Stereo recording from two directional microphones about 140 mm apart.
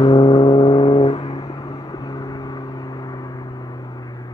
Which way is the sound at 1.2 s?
30° left (ahead or behind).